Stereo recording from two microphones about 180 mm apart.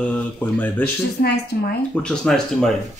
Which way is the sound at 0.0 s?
10° left (ahead or behind).